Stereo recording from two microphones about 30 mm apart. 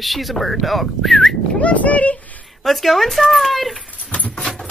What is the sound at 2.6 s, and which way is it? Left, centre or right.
Speech, centre.